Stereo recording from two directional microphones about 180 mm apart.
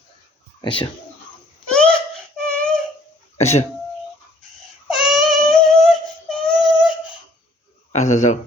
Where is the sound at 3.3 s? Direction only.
35° left (ahead or behind).